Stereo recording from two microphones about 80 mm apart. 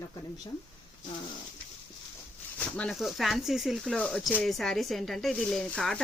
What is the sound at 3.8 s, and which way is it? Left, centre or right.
Speech, centre.